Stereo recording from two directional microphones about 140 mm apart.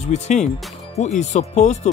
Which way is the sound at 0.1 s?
55° left (ahead or behind).